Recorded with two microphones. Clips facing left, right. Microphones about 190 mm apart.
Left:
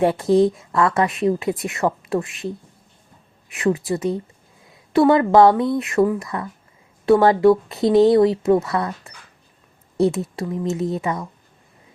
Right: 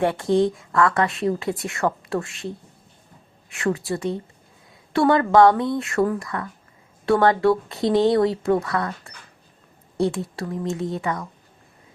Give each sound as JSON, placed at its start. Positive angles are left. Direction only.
{"t": 0.0, "sound": "speech", "side_deg": 20}
{"t": 3.5, "sound": "speech", "side_deg": 20}